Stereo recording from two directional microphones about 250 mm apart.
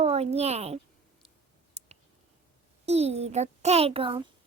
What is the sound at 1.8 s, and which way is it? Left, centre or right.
Clicking, right.